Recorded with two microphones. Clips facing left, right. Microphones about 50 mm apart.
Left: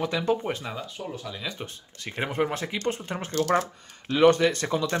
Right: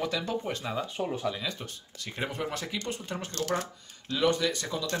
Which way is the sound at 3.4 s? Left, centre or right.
Left.